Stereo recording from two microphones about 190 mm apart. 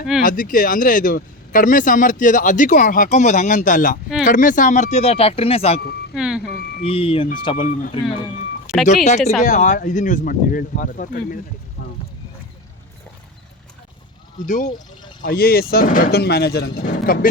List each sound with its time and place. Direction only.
0.2 s speech: 45° left (ahead or behind); by 5.8 s 30° left (ahead or behind)
6.1 s speech: 5° right (ahead or behind)
6.8 s speech: 30° left (ahead or behind)
8.7 s speech: 5° right (ahead or behind)
9.0 s speech: 40° left (ahead or behind)
14.4 s speech: 40° left (ahead or behind)
15.2 s speech: 50° left (ahead or behind)